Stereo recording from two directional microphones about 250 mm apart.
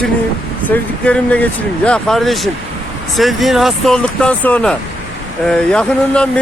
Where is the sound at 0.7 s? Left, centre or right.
Centre.